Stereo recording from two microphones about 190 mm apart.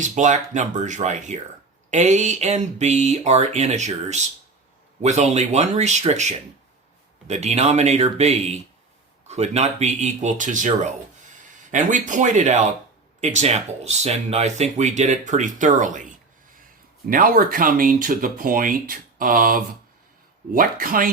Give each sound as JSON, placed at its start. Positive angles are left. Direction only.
{"t": 0.0, "sound": "speech", "side_deg": -40}
{"t": 17.1, "sound": "speech", "side_deg": -50}